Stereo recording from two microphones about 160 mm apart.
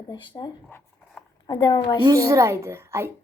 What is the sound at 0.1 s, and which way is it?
Speech, 30° left (ahead or behind).